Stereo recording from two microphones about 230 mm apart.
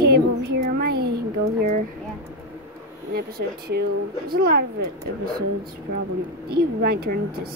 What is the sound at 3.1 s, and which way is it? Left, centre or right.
Speech, right.